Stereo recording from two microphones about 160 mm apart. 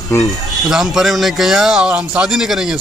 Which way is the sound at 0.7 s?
Centre (ahead or behind).